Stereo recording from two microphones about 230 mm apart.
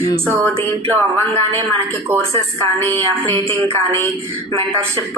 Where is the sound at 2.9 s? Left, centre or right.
Right.